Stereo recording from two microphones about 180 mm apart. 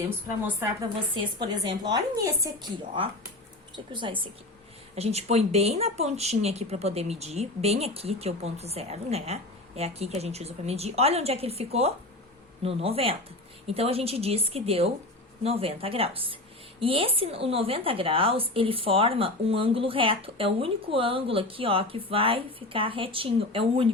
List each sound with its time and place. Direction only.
1.1 s a woman's voice: 25° right (ahead or behind)
3.9 s a woman's voice: 25° right (ahead or behind)